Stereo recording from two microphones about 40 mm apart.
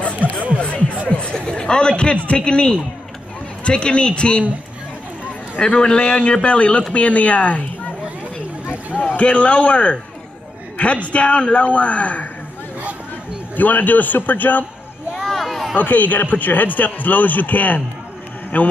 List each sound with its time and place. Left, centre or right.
0.1 s music: right
1.0 s a sound: left
1.3 s chatter: centre
2.2 s a man's voice: left
5.7 s a man's voice: left
8.9 s a man's voice: left
11.1 s speech: left
13.6 s a man's voice: left
15.2 s a sound: centre
15.7 s a man's voice: left